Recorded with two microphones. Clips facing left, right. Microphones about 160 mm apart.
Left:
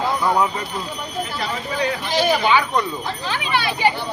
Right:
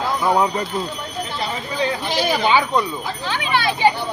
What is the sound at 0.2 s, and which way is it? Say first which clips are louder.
Speech: right 1 dB; 20° right (ahead or behind).